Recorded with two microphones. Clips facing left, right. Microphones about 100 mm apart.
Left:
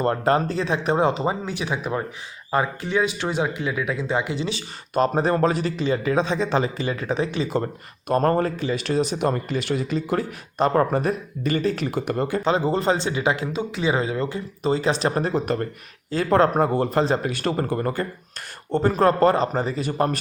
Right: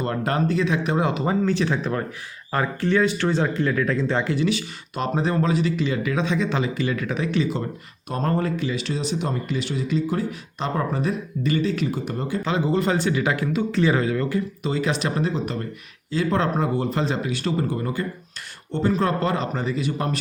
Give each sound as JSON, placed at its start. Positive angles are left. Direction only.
{"t": 0.0, "sound": "speech", "side_deg": 35}
{"t": 1.3, "sound": "speech", "side_deg": 15}
{"t": 4.4, "sound": "speech", "side_deg": 30}
{"t": 5.1, "sound": "speech", "side_deg": 45}
{"t": 8.0, "sound": "speech", "side_deg": 50}
{"t": 11.9, "sound": "speech", "side_deg": 65}
{"t": 12.5, "sound": "speech", "side_deg": 35}
{"t": 15.2, "sound": "speech", "side_deg": 50}